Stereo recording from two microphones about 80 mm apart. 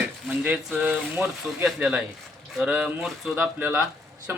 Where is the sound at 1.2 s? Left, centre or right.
Centre.